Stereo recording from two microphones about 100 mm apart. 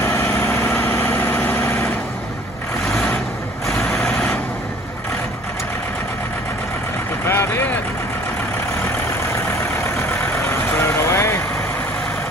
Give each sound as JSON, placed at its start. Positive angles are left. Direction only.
{"t": 0.0, "sound": "vehicle", "side_deg": 25}
{"t": 3.6, "sound": "vehicle", "side_deg": 0}
{"t": 7.2, "sound": "vehicle", "side_deg": 25}
{"t": 10.8, "sound": "vehicle", "side_deg": 25}